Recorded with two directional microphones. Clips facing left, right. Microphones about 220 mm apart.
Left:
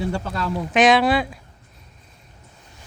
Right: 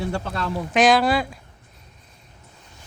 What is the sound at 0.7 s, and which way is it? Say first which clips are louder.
Speech: left 1 dB; centre (ahead or behind).